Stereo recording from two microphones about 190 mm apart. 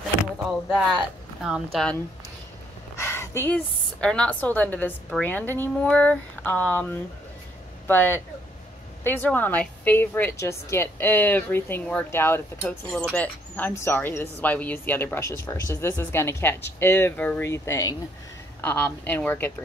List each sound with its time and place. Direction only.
0.2 s speech: centre (ahead or behind)
3.0 s a woman's voice: 15° left (ahead or behind)